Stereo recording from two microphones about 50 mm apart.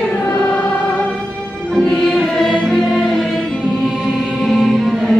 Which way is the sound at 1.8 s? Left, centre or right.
Centre.